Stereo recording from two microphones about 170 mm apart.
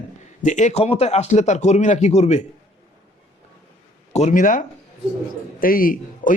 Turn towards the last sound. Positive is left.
turn(degrees=55)  # may be behind; listen again after turning